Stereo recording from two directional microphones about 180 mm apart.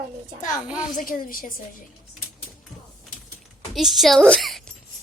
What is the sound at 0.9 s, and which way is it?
Speech, 50° left (ahead or behind).